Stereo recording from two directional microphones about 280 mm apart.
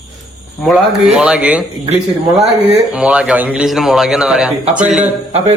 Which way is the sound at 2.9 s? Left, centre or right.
Centre.